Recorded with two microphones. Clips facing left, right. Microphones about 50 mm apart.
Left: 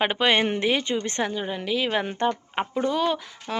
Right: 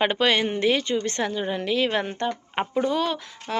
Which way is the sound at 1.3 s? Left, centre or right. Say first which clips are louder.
Right 2 dB; centre.